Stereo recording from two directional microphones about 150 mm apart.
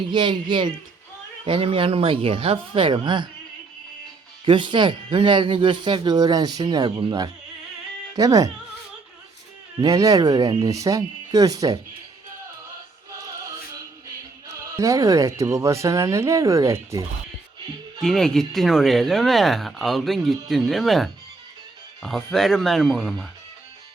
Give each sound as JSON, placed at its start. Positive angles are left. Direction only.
{"t": 0.1, "sound": "speech", "side_deg": -30}
{"t": 4.4, "sound": "speech", "side_deg": -30}
{"t": 9.8, "sound": "speech", "side_deg": -25}
{"t": 14.4, "sound": "speech", "side_deg": -20}
{"t": 18.0, "sound": "speech", "side_deg": 5}